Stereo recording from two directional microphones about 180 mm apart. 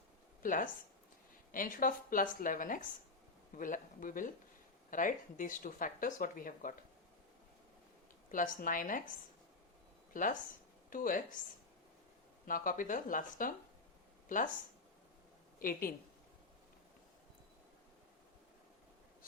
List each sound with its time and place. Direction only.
0.4 s speech: 50° left (ahead or behind)
8.3 s speech: 50° left (ahead or behind)
12.5 s speech: 50° left (ahead or behind)
15.5 s speech: 50° left (ahead or behind)